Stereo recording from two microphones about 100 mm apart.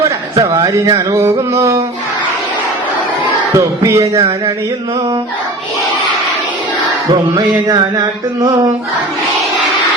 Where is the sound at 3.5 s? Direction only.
30° right (ahead or behind).